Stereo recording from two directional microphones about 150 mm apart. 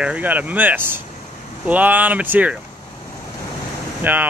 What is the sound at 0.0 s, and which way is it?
Speech, 10° right (ahead or behind).